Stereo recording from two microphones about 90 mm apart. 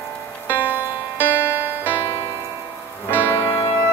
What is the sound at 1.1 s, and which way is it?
Music, 20° right (ahead or behind).